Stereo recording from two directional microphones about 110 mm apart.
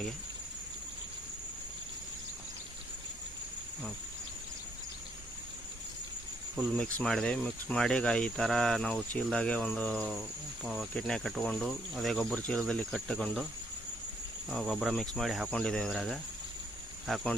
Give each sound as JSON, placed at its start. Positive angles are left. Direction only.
{"t": 6.7, "sound": "speech", "side_deg": 5}
{"t": 10.6, "sound": "speech", "side_deg": 0}
{"t": 14.5, "sound": "speech", "side_deg": 0}